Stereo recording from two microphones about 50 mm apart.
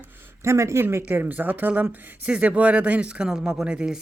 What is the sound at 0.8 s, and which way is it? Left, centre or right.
Speech, right.